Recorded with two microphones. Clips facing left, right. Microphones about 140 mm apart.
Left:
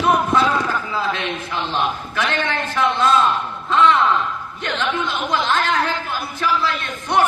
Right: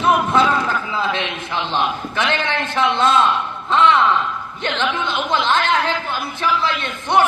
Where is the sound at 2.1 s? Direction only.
25° right (ahead or behind).